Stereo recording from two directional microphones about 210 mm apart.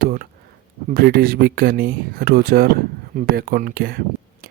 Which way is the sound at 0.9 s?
45° right (ahead or behind).